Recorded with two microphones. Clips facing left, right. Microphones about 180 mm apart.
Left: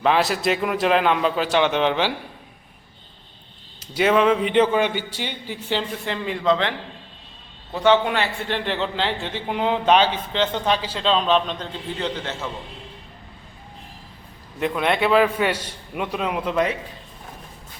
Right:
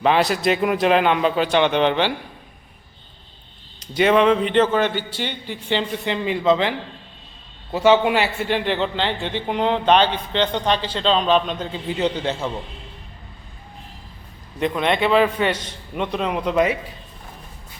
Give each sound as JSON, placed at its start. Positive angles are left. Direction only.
{"t": 0.0, "sound": "a man's voice", "side_deg": 0}
{"t": 3.8, "sound": "a man's voice", "side_deg": 5}
{"t": 11.9, "sound": "a man's voice", "side_deg": -15}
{"t": 14.8, "sound": "a man's voice", "side_deg": 5}